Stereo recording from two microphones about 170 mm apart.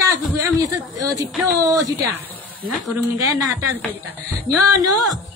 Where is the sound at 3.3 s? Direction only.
20° right (ahead or behind).